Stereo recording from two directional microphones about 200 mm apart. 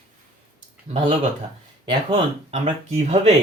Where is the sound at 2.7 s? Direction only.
30° right (ahead or behind).